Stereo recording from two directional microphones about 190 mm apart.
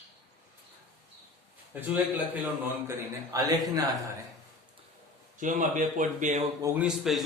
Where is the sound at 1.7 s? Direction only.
10° right (ahead or behind).